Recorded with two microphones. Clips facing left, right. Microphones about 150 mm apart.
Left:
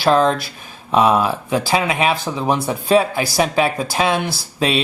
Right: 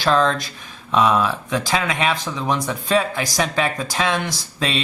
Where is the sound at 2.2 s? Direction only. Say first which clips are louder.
Left 4 dB; 30° left (ahead or behind).